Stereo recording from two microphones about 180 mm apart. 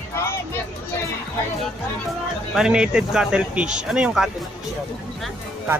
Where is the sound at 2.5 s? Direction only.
5° right (ahead or behind).